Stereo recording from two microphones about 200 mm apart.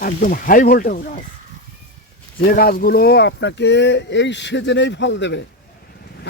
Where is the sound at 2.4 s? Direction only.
50° left (ahead or behind).